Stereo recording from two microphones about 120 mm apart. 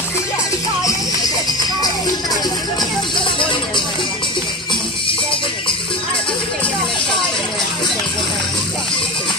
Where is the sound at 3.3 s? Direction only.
40° left (ahead or behind).